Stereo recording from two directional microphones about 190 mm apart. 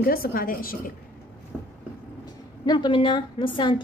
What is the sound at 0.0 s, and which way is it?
Speech, 50° left (ahead or behind).